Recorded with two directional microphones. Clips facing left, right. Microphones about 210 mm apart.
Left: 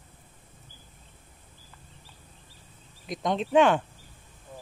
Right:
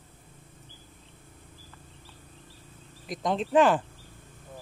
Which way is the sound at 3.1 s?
Centre (ahead or behind).